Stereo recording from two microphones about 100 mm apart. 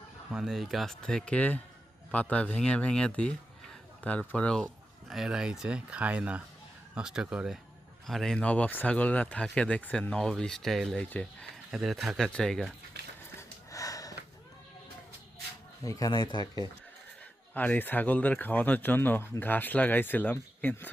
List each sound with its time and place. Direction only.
0.3 s speech: 5° right (ahead or behind); by 11.4 s 10° left (ahead or behind)
11.7 s speech: centre (ahead or behind)
13.7 s sniff: 35° left (ahead or behind)
15.8 s speech: 35° left (ahead or behind)
17.5 s speech: 15° left (ahead or behind)